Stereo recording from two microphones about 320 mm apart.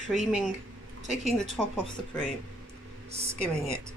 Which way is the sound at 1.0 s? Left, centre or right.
Right.